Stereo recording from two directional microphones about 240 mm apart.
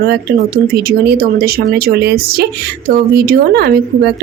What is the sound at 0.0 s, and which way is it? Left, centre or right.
A woman's voice, right.